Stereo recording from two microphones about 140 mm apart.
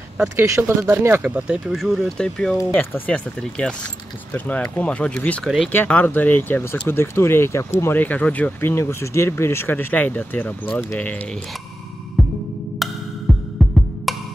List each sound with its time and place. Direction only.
0.4 s speech: 15° right (ahead or behind); by 11.4 s 10° left (ahead or behind)
12.8 s music: centre (ahead or behind)
14.1 s music: centre (ahead or behind)